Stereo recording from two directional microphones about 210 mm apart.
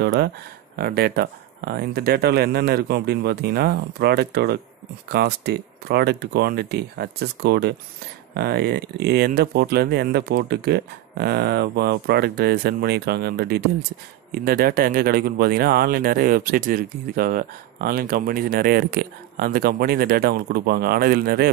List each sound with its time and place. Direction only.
0.0 s speech: 50° right (ahead or behind)